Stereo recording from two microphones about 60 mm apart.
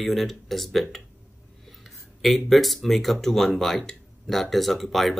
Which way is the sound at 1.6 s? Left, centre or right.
Centre.